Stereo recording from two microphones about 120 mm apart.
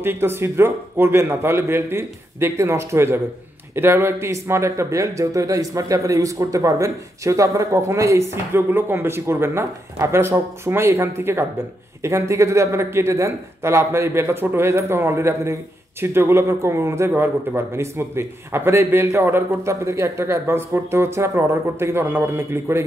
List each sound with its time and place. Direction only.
0.0 s speech: 20° right (ahead or behind)